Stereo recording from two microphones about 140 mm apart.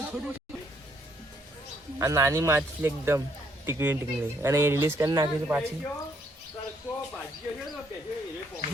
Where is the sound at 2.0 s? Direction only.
20° right (ahead or behind).